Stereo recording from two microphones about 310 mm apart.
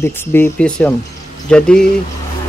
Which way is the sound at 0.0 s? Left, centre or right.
Centre.